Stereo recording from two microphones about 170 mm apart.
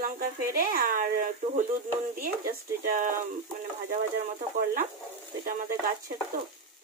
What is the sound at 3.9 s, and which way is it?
Stir, 55° right (ahead or behind).